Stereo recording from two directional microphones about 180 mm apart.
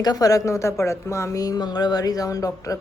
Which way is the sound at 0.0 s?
20° left (ahead or behind).